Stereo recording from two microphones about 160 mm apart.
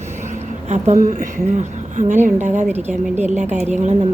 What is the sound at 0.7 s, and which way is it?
A woman's voice, 45° right (ahead or behind).